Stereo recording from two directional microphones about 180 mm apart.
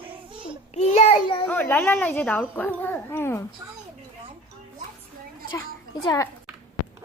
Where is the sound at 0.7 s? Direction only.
35° left (ahead or behind).